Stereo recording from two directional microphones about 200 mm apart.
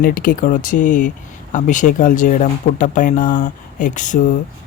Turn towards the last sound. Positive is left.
turn(degrees=40)  # may be behind; listen again after turning